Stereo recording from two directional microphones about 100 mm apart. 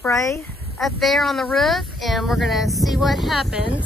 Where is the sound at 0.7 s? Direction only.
Centre (ahead or behind).